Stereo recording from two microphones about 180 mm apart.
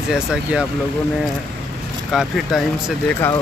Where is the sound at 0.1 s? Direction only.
5° right (ahead or behind).